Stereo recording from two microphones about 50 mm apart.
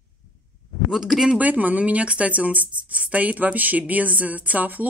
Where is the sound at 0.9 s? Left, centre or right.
Centre.